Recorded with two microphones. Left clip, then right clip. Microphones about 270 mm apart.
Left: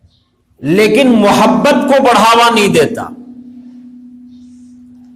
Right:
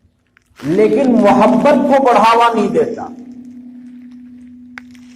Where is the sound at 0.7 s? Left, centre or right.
Left.